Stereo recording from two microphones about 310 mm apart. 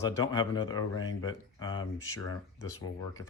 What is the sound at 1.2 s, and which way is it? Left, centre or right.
Speech, left.